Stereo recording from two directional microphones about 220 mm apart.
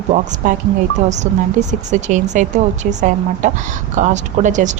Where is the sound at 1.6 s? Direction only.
30° right (ahead or behind).